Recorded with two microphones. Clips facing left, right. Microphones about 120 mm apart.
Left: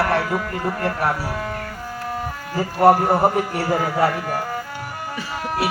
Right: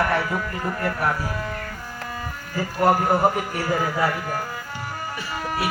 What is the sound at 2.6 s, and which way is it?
Speech, 30° left (ahead or behind).